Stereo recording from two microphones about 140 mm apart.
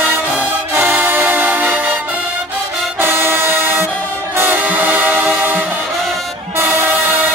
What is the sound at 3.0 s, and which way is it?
Music, 15° right (ahead or behind).